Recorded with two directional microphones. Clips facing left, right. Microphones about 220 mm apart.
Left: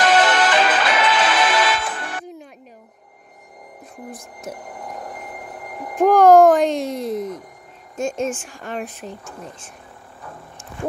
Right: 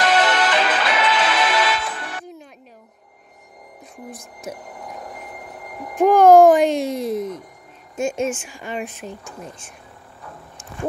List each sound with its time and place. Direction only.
0.0 s music: 50° left (ahead or behind)
4.6 s a sound: 50° left (ahead or behind)
5.9 s a child's voice: 5° right (ahead or behind)